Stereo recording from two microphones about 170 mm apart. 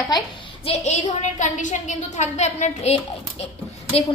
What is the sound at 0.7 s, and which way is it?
A woman's voice, 40° left (ahead or behind).